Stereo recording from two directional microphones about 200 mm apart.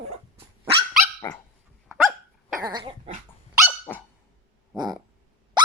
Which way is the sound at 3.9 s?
10° left (ahead or behind).